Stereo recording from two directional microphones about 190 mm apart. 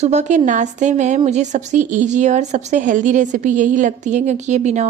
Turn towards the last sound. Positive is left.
turn(degrees=-35)  # may be behind; listen again after turning